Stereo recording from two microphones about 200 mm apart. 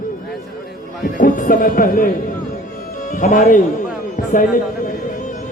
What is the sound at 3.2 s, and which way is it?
Speech, 40° left (ahead or behind).